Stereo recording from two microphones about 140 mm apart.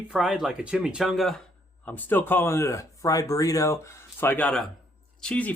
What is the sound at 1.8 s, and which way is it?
Speech, 15° left (ahead or behind).